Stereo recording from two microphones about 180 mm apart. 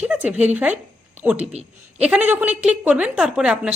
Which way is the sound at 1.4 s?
35° right (ahead or behind).